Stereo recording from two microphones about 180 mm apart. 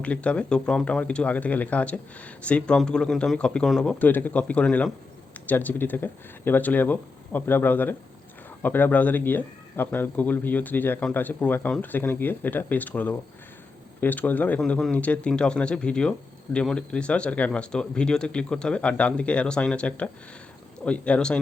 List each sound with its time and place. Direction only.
0.0 s speech: 5° left (ahead or behind)